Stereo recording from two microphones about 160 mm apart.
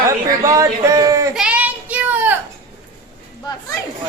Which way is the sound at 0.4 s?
20° right (ahead or behind).